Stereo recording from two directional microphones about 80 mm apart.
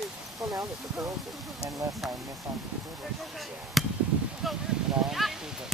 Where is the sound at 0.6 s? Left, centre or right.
Right.